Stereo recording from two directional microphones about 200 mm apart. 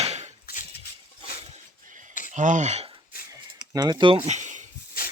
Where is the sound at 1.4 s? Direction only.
35° right (ahead or behind).